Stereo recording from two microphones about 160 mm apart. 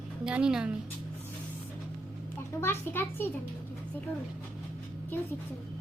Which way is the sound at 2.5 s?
15° left (ahead or behind).